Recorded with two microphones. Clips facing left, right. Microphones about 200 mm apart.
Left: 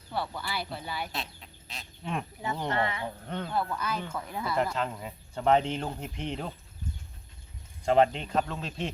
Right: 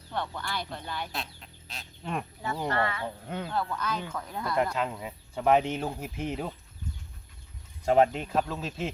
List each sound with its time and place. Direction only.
0.1 s speech: 5° left (ahead or behind)
2.6 s speech: 20° left (ahead or behind)
3.2 s speech: 5° right (ahead or behind)
3.5 s speech: 10° left (ahead or behind)
7.9 s speech: 5° right (ahead or behind)